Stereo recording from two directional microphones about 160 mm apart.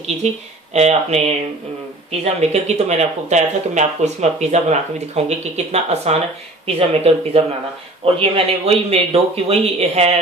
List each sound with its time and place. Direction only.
0.2 s speech: 45° right (ahead or behind)